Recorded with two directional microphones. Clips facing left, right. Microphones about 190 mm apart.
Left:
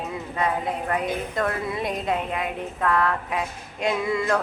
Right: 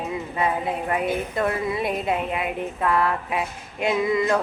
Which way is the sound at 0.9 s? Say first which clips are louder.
Right 2 dB; 10° right (ahead or behind).